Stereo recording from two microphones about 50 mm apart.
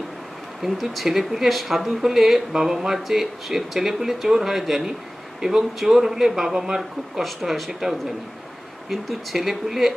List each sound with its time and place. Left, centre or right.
0.6 s speech: centre